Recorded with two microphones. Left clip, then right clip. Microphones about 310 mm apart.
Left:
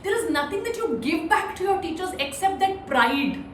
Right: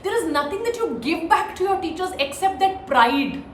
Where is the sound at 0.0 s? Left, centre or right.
Centre.